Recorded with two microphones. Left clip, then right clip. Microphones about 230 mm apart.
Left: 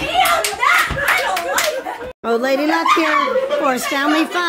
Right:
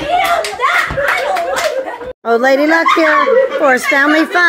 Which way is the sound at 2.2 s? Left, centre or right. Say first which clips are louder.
Right 6 dB; centre.